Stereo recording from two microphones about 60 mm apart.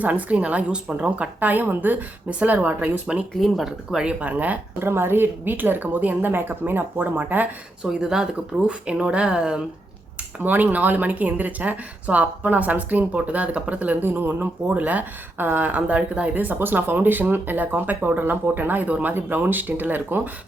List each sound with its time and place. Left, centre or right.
0.0 s speech: right
1.4 s speech: right
3.4 s speech: centre
4.0 s speech: right
4.8 s speech: right
7.9 s speech: centre
10.4 s speech: right